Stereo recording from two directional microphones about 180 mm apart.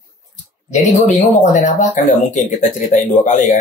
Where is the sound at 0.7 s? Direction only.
40° left (ahead or behind).